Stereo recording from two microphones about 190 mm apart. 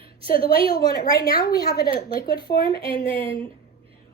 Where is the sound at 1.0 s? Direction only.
20° left (ahead or behind).